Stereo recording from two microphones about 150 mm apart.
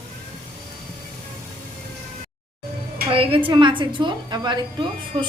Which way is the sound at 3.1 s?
35° right (ahead or behind).